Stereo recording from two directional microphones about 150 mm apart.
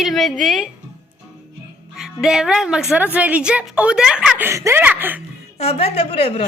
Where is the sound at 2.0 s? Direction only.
5° right (ahead or behind).